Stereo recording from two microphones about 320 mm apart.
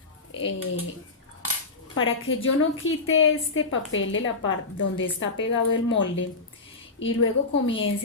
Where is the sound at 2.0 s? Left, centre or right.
Left.